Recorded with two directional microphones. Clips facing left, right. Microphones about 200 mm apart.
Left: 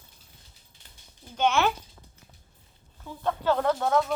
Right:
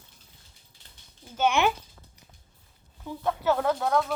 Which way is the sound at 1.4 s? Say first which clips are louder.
Even; 15° right (ahead or behind).